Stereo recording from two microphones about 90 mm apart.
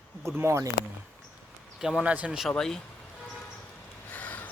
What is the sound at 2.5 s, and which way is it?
Speech, 5° left (ahead or behind).